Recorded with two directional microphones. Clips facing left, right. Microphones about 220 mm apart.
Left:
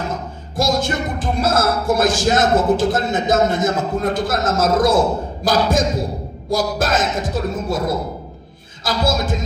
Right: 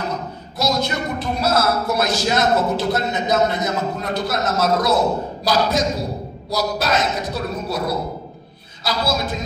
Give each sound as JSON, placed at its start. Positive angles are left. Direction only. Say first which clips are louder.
{"t": 0.1, "sound": "a man's voice", "louder": "left 1 dB", "side_deg": 50}